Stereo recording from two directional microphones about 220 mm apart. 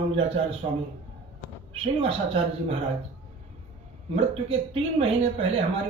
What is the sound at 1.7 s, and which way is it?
A man's voice, 25° right (ahead or behind).